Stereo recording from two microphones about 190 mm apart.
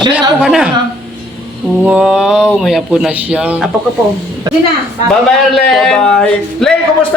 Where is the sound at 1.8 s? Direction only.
5° right (ahead or behind).